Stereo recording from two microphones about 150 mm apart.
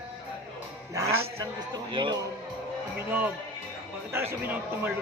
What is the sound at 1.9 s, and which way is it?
Music, 30° right (ahead or behind).